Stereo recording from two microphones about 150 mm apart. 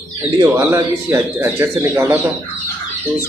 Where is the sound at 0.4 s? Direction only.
20° right (ahead or behind).